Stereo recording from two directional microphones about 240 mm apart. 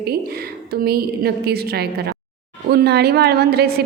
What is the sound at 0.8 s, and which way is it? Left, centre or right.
A woman's voice, right.